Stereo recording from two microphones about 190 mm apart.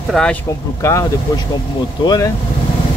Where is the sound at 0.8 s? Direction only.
15° left (ahead or behind).